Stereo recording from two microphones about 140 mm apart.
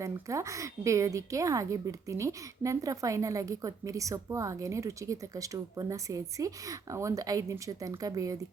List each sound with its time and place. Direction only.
0.0 s a woman's voice: 20° right (ahead or behind)